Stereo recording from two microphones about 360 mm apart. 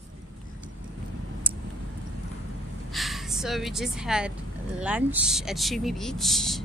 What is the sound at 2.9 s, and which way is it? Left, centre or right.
Speech, centre.